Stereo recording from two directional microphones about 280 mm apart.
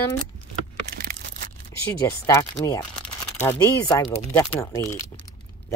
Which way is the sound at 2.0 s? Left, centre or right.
Centre.